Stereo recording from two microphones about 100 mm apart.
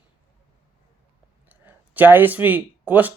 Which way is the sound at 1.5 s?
15° right (ahead or behind).